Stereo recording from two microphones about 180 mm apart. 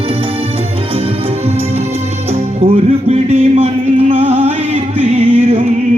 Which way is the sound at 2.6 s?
35° right (ahead or behind).